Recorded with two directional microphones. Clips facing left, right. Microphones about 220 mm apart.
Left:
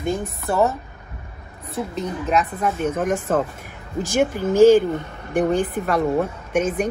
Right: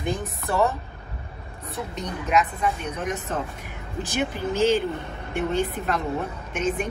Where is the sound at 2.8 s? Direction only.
50° left (ahead or behind).